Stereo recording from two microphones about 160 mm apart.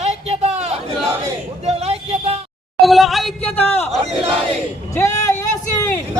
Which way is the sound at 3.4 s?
10° left (ahead or behind).